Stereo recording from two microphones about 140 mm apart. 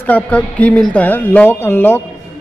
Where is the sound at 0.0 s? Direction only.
10° left (ahead or behind).